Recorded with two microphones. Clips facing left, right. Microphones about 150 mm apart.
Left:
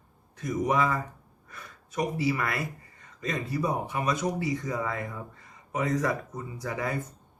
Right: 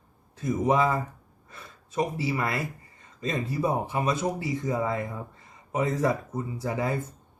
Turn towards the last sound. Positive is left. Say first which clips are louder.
# right 3 dB
turn(degrees=-25)  # may be behind; listen again after turning